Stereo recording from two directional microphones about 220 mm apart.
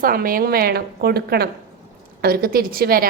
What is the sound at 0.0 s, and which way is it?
A woman's voice, 40° right (ahead or behind).